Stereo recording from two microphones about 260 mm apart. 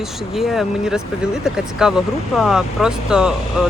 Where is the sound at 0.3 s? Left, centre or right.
Centre.